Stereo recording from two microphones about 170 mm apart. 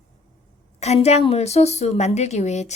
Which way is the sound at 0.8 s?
40° left (ahead or behind).